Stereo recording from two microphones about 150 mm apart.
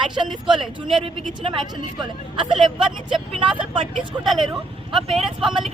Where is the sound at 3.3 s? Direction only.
35° right (ahead or behind).